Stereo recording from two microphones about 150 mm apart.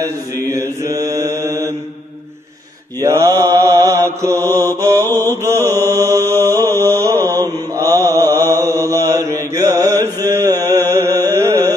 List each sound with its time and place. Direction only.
0.5 s mantra: 20° right (ahead or behind)
3.0 s mantra: 20° right (ahead or behind)
7.2 s mantra: 15° left (ahead or behind)
7.4 s mantra: 20° right (ahead or behind)
10.7 s music: 20° right (ahead or behind)
11.1 s carnatic music: 25° right (ahead or behind)